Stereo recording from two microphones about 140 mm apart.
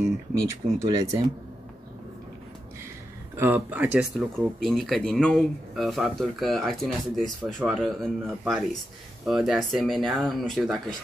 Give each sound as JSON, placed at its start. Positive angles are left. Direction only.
{"t": 0.5, "sound": "speech", "side_deg": -25}
{"t": 3.3, "sound": "speech", "side_deg": -15}